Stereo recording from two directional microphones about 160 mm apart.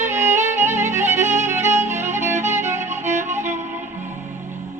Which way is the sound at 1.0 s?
15° right (ahead or behind).